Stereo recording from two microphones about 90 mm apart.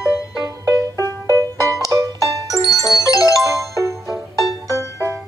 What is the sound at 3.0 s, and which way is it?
Music, 40° left (ahead or behind).